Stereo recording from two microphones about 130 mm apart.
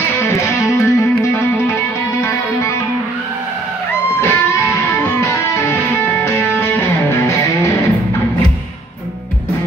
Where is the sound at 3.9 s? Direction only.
20° left (ahead or behind).